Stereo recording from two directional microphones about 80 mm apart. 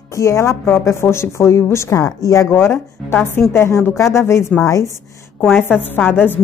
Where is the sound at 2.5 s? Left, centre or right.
Left.